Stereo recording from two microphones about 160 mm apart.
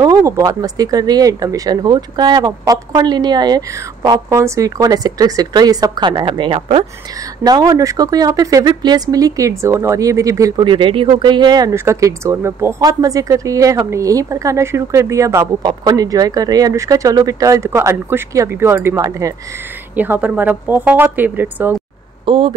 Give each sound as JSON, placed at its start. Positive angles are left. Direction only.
{"t": 0.0, "sound": "speech", "side_deg": -25}
{"t": 7.4, "sound": "speech", "side_deg": -25}
{"t": 10.5, "sound": "speech", "side_deg": -30}
{"t": 20.0, "sound": "speech", "side_deg": -10}
{"t": 22.2, "sound": "speech", "side_deg": -35}